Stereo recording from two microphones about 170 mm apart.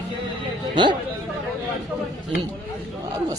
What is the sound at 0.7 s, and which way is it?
Speech, 25° right (ahead or behind).